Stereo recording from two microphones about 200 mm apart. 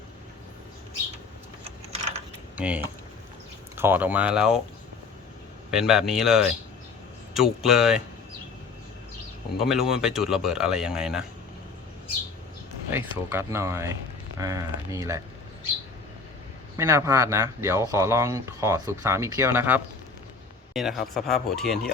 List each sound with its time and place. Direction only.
2.6 s speech: 5° right (ahead or behind)
5.7 s speech: centre (ahead or behind)
9.6 s speech: centre (ahead or behind)
12.9 s speech: 10° right (ahead or behind)
16.7 s speech: 15° right (ahead or behind); by 21.9 s centre (ahead or behind)